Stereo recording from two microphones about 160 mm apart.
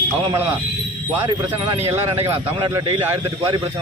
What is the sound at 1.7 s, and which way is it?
A man's voice, 15° right (ahead or behind).